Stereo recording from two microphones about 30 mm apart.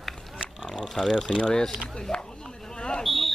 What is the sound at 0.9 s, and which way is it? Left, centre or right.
Speech, centre.